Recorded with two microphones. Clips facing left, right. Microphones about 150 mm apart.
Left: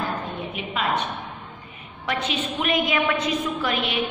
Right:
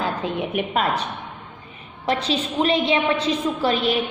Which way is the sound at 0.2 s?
65° right (ahead or behind).